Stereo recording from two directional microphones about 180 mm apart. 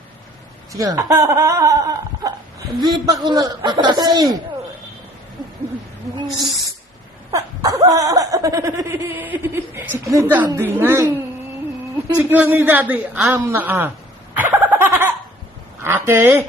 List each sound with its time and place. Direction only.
0.7 s speech: 20° right (ahead or behind)
7.3 s speech: 20° right (ahead or behind)
12.0 s speech: 10° right (ahead or behind)
14.3 s a sound: 10° right (ahead or behind)